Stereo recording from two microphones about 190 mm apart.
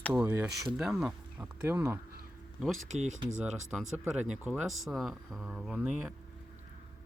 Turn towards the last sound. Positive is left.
turn(degrees=0)  # may be behind; listen again after turning